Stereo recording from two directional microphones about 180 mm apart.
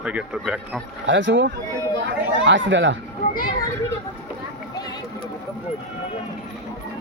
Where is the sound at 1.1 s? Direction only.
90° right.